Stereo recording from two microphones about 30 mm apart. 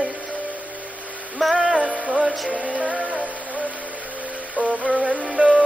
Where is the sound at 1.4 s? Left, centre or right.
Centre.